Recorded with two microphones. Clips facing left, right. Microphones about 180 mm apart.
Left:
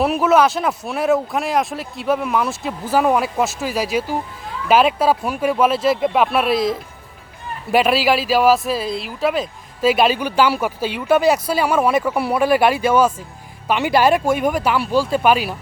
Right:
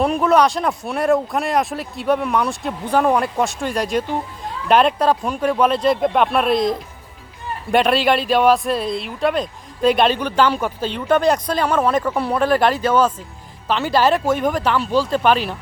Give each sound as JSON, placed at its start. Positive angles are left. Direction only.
{"t": 0.0, "sound": "speech", "side_deg": 5}